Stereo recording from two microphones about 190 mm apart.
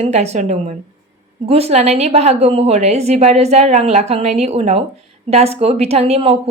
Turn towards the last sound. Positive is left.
turn(degrees=-35)  # may be behind; listen again after turning